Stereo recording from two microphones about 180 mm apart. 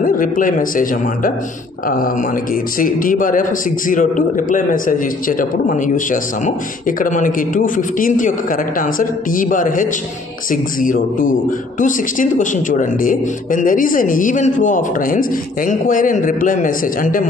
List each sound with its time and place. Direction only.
0.0 s speech: 50° left (ahead or behind)
2.8 s speech: 50° left (ahead or behind)